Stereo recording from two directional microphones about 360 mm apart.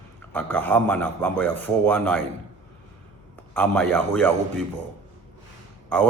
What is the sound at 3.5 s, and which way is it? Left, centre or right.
Speech, centre.